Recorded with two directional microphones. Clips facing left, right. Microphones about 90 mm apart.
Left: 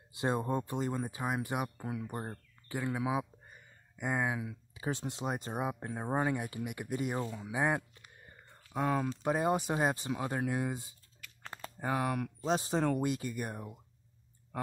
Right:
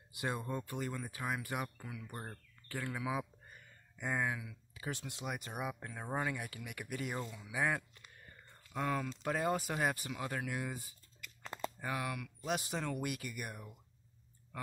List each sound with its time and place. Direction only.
0.1 s speech: 30° left (ahead or behind)
4.4 s speech: 30° left (ahead or behind)
11.8 s speech: 35° left (ahead or behind)